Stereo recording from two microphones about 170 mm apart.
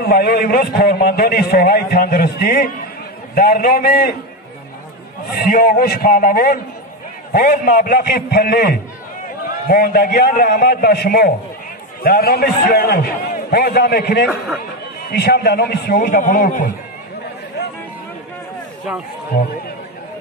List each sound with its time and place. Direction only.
0.0 s a man's voice: 65° left (ahead or behind)
5.3 s a man's voice: 65° left (ahead or behind)
16.0 s a man's voice: 50° left (ahead or behind)